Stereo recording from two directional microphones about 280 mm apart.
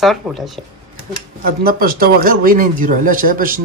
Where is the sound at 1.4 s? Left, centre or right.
Right.